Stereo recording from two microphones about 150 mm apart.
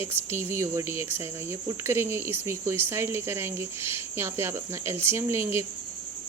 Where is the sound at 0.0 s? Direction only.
15° right (ahead or behind).